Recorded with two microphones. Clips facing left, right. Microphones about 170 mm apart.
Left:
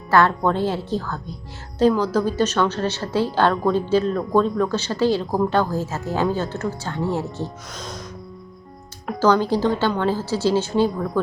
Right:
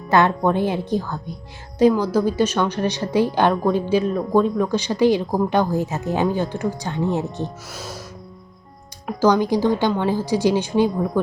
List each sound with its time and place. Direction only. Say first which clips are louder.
0.1 s a woman's voice: right 1 dB; 15° right (ahead or behind)
7.7 s a woman's voice: even; 5° right (ahead or behind)
9.0 s a woman's voice: right 1 dB; 10° right (ahead or behind)